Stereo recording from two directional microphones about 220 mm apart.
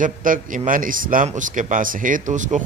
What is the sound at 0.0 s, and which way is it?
Speech, 35° right (ahead or behind).